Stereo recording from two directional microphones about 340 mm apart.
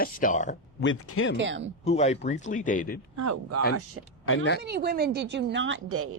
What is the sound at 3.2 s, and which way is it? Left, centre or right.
Speech, right.